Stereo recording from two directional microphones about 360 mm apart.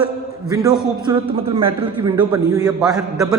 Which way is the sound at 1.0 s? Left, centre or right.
Centre.